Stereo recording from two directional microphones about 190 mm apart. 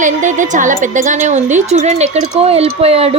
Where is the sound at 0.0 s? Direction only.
40° right (ahead or behind).